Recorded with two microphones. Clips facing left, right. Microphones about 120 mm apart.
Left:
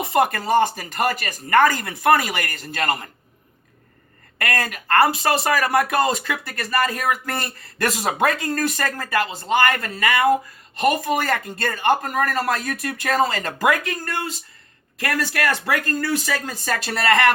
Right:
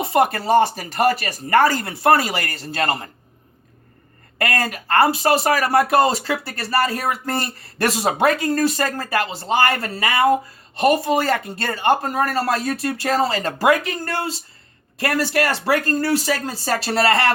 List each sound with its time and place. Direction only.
0.0 s speech: 25° right (ahead or behind)
4.4 s speech: 30° right (ahead or behind)